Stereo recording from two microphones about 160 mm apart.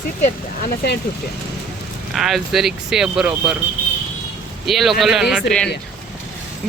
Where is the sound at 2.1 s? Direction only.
Centre (ahead or behind).